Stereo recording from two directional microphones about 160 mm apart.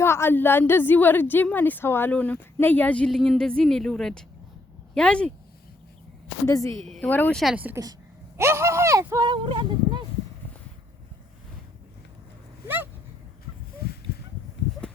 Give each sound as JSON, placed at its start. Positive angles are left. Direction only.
{"t": 0.0, "sound": "a woman's voice", "side_deg": 15}
{"t": 6.4, "sound": "speech", "side_deg": 20}
{"t": 6.8, "sound": "a woman's voice", "side_deg": 0}
{"t": 7.5, "sound": "a woman's voice", "side_deg": -10}
{"t": 12.6, "sound": "dog", "side_deg": -10}
{"t": 13.8, "sound": "a sound", "side_deg": 75}